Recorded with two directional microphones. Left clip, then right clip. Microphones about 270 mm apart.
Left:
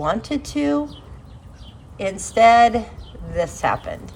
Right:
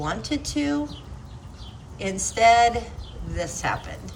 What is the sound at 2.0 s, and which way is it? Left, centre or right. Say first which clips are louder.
A woman's voice: left 6 dB; centre.